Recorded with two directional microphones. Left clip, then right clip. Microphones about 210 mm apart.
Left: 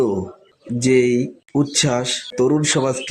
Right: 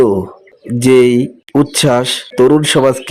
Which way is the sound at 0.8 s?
25° right (ahead or behind).